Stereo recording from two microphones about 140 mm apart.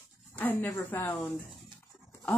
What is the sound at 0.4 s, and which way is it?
Speech, 10° left (ahead or behind).